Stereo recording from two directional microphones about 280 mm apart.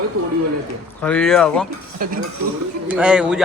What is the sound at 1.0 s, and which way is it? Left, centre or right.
Speech, centre.